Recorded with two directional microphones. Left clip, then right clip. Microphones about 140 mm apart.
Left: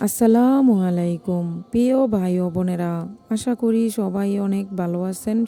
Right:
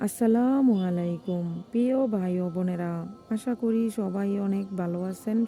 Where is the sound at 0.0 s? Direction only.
30° left (ahead or behind).